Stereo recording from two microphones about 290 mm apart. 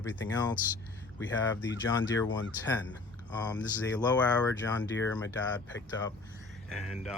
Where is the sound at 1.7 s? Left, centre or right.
Left.